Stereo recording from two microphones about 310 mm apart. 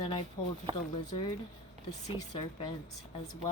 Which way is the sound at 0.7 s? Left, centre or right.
Centre.